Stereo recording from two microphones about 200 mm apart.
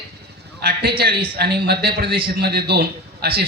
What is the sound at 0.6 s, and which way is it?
A man's voice, 55° right (ahead or behind).